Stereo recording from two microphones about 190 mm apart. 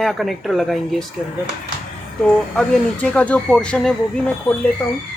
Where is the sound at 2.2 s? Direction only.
5° left (ahead or behind).